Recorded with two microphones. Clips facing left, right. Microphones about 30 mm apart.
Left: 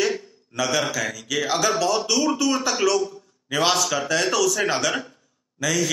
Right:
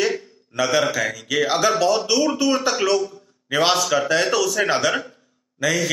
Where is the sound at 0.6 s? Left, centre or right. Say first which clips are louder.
Right 4 dB; centre.